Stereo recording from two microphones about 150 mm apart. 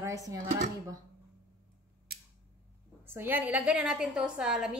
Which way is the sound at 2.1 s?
90° right.